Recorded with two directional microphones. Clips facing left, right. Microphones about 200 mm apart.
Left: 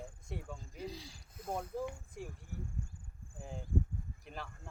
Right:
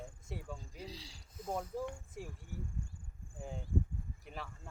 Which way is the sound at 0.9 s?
50° left (ahead or behind).